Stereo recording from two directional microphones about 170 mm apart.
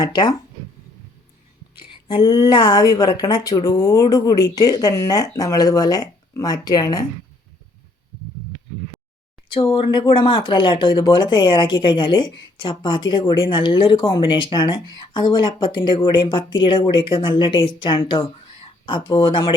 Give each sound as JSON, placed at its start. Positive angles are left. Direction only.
{"t": 0.0, "sound": "speech", "side_deg": 25}
{"t": 1.7, "sound": "speech", "side_deg": 30}
{"t": 9.5, "sound": "speech", "side_deg": 30}